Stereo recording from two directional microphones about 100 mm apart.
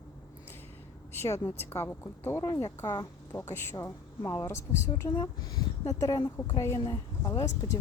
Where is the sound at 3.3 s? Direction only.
25° left (ahead or behind).